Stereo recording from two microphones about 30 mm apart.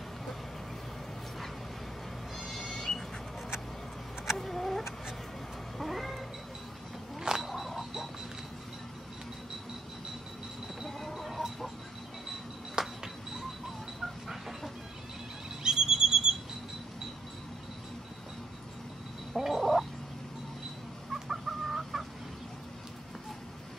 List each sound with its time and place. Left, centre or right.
2.3 s owl: centre
4.4 s vehicle: centre
5.8 s cat: centre
7.2 s a sound: centre
10.9 s a sound: centre
12.7 s a sound: centre
15.6 s bird: right
19.3 s gargling: centre
21.1 s chicken: centre